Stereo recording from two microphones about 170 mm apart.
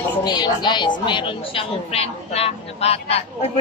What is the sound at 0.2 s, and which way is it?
A woman's voice, 25° left (ahead or behind).